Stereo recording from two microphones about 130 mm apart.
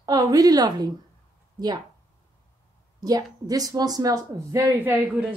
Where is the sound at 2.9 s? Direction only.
30° right (ahead or behind).